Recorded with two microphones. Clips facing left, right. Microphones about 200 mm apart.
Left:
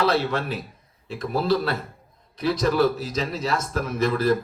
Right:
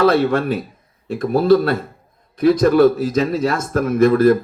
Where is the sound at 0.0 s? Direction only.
50° right (ahead or behind).